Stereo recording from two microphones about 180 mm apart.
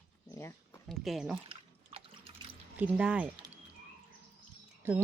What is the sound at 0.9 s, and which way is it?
Speech, centre (ahead or behind).